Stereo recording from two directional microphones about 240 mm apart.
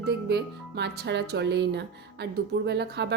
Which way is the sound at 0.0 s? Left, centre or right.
Right.